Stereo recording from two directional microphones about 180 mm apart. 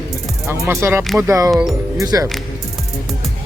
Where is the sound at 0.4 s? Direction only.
15° right (ahead or behind).